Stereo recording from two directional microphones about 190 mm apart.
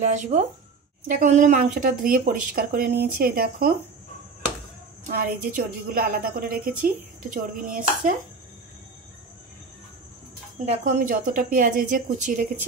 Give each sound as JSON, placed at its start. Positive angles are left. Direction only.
{"t": 0.0, "sound": "a woman's voice", "side_deg": -40}
{"t": 5.0, "sound": "a woman's voice", "side_deg": -45}
{"t": 10.6, "sound": "a woman's voice", "side_deg": -40}